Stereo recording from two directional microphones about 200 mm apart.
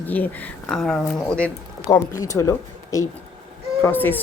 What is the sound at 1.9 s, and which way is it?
Speech, 15° left (ahead or behind).